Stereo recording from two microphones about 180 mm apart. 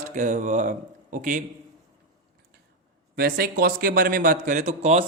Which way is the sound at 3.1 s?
60° right (ahead or behind).